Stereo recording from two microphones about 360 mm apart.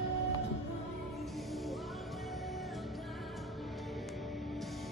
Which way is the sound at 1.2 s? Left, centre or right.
Centre.